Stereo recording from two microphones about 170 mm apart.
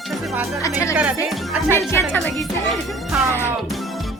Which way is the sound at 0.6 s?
20° left (ahead or behind).